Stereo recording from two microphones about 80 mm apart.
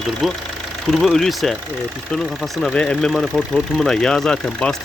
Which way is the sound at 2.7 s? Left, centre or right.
Centre.